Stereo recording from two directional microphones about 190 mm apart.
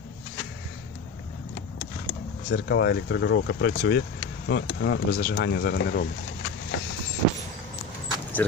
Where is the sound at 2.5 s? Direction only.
65° left (ahead or behind).